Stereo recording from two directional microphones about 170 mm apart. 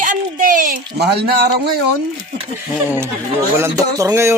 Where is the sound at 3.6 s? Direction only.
15° right (ahead or behind).